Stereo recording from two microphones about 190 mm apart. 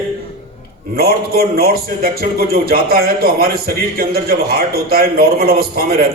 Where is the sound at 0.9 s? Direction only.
55° right (ahead or behind).